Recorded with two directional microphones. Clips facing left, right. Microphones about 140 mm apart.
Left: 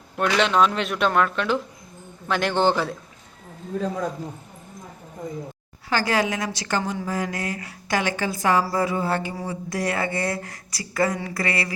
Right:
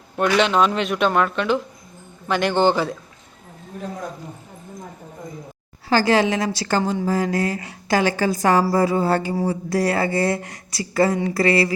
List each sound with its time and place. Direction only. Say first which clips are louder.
0.2 s speech: right 2 dB; centre (ahead or behind)
5.9 s a woman's voice: right 5 dB; 30° right (ahead or behind)